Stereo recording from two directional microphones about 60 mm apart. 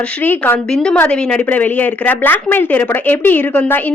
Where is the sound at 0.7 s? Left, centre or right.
Centre.